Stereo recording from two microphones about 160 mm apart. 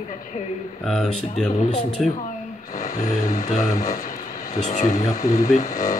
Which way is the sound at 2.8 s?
55° left (ahead or behind).